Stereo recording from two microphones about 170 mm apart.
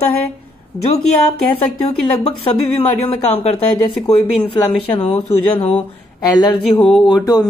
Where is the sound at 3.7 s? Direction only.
25° left (ahead or behind).